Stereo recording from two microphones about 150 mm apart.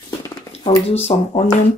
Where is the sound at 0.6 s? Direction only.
45° left (ahead or behind).